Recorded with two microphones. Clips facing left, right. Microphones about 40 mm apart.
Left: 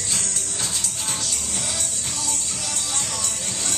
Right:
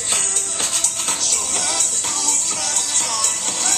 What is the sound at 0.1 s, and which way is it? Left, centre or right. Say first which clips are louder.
Music: right 6 dB; right.